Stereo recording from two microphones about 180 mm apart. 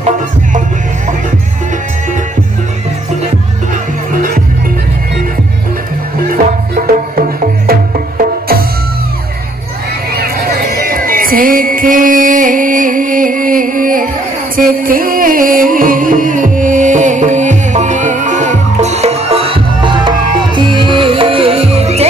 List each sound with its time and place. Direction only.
6.3 s music: 50° right (ahead or behind)
10.1 s music: 55° right (ahead or behind); by 22.0 s 35° right (ahead or behind)